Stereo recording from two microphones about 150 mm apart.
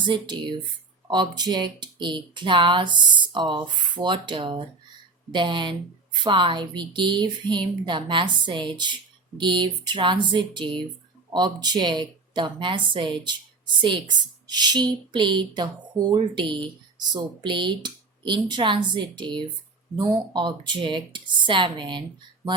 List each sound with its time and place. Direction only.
0.0 s speech: 30° right (ahead or behind)